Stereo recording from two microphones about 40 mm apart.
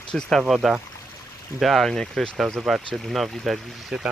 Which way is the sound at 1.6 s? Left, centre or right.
Centre.